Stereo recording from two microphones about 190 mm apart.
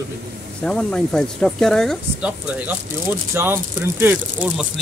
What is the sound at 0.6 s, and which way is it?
Speech, 5° left (ahead or behind).